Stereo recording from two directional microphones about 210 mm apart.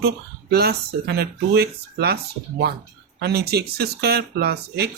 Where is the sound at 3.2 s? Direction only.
50° right (ahead or behind).